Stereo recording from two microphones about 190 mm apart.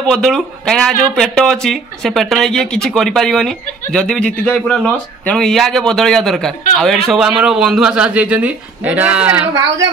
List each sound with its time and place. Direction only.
0.0 s speech: 5° left (ahead or behind); by 9.8 s 10° right (ahead or behind)